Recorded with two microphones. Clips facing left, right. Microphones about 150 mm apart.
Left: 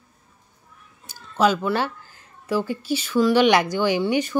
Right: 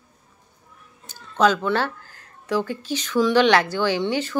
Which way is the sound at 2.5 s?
10° left (ahead or behind).